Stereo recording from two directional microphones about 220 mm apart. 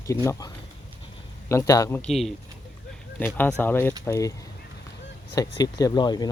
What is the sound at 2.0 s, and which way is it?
Speech, centre (ahead or behind).